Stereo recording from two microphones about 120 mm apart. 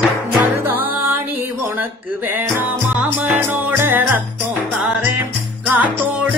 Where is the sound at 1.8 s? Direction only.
20° right (ahead or behind).